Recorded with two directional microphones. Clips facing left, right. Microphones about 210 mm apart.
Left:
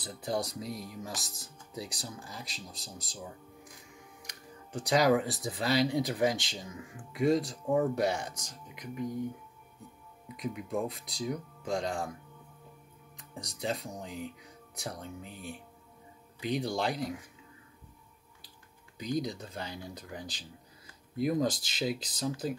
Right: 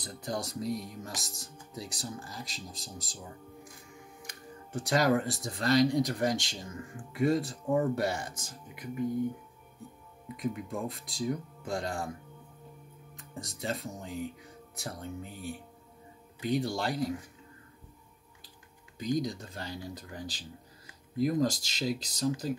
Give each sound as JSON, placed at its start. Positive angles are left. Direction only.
{"t": 0.0, "sound": "speech", "side_deg": 5}
{"t": 4.7, "sound": "speech", "side_deg": 0}
{"t": 10.2, "sound": "speech", "side_deg": 0}
{"t": 13.1, "sound": "speech", "side_deg": 0}
{"t": 19.1, "sound": "speech", "side_deg": 0}